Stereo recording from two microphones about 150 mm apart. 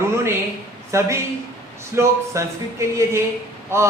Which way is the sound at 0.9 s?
20° right (ahead or behind).